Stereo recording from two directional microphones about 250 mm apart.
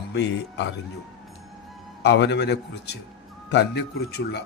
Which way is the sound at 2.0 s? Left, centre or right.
Left.